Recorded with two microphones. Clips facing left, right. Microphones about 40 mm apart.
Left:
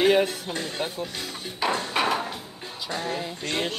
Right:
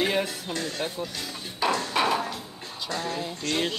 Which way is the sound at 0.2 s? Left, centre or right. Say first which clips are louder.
Left 3 dB; left.